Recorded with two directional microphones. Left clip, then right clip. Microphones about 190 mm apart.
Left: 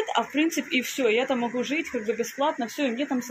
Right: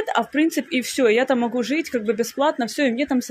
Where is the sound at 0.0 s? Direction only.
35° right (ahead or behind).